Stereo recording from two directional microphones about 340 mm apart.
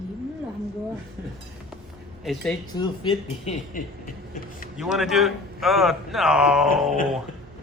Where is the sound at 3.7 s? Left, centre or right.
Left.